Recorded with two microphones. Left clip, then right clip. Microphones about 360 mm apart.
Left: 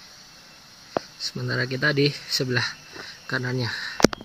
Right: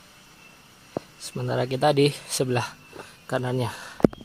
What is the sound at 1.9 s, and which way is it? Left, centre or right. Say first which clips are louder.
Speech: right 1 dB; right.